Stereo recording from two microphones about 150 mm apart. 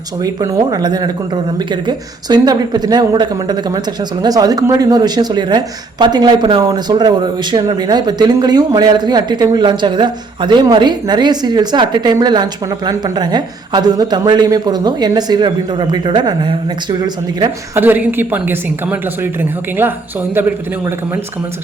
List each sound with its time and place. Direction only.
0.2 s speech: 20° right (ahead or behind)
17.7 s a woman's voice: 10° right (ahead or behind)